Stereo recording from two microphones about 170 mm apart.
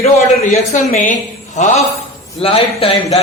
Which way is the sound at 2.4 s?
35° left (ahead or behind).